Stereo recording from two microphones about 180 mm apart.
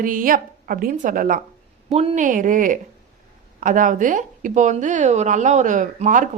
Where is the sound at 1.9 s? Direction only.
35° right (ahead or behind).